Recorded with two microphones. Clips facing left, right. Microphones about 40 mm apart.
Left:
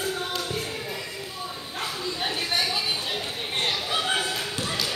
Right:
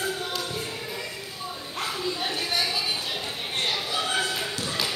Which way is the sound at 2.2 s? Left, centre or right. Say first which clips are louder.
Left 3 dB; centre.